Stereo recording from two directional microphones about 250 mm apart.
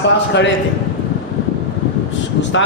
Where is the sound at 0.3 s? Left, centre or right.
Left.